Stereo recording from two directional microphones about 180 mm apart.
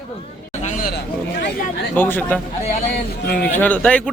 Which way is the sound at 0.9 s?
80° left.